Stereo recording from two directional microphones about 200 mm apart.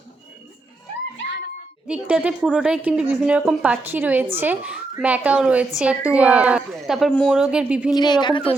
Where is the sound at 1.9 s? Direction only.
5° right (ahead or behind).